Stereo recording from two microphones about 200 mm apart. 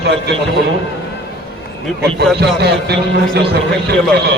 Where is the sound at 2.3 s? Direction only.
55° right (ahead or behind).